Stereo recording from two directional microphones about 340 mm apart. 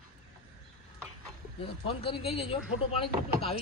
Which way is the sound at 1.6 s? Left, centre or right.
Centre.